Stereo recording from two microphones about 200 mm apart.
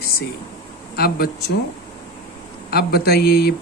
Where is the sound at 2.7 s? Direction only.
50° left (ahead or behind).